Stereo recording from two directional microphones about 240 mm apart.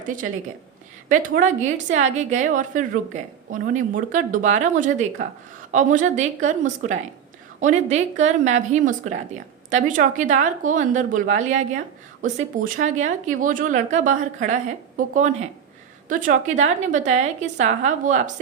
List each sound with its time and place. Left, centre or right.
1.1 s a woman's voice: right